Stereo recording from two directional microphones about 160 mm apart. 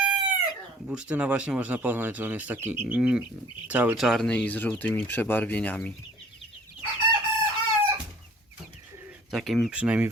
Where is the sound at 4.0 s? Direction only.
Centre (ahead or behind).